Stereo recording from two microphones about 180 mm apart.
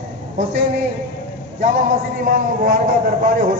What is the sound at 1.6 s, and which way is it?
A man's voice, 45° right (ahead or behind).